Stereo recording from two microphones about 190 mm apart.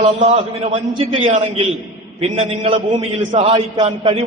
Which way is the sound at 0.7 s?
30° right (ahead or behind).